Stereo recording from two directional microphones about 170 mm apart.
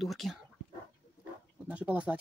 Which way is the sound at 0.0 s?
Centre (ahead or behind).